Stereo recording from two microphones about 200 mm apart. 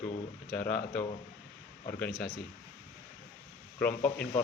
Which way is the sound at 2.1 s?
5° left (ahead or behind).